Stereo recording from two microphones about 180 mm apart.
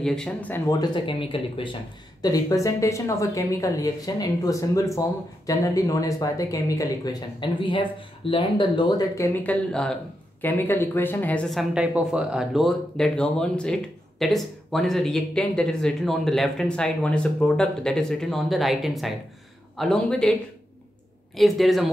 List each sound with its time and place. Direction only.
0.0 s speech: 5° left (ahead or behind)
0.7 s speech: 25° left (ahead or behind); by 11.6 s 5° left (ahead or behind)
11.7 s speech: 5° right (ahead or behind)
21.4 s speech: centre (ahead or behind)